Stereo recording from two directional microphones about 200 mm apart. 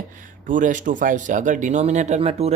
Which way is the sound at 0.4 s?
40° right (ahead or behind).